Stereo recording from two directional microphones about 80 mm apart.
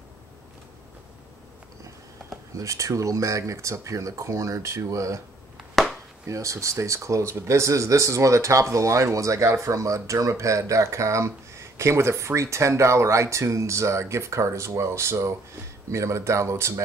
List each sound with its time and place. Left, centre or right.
2.5 s speech: right
5.8 s chop: centre
6.2 s speech: right